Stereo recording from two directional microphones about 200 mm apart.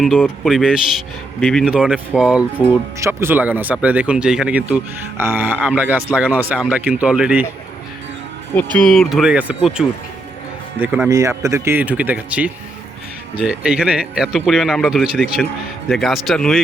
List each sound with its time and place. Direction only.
0.0 s speech: centre (ahead or behind)
8.7 s speech: 5° left (ahead or behind)